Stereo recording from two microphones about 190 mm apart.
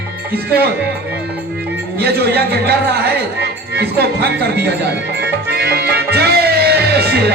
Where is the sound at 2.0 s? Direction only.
55° right (ahead or behind).